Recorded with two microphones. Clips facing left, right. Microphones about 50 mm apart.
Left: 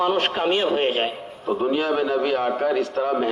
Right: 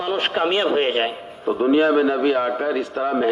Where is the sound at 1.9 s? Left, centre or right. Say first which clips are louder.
Right 3 dB; centre.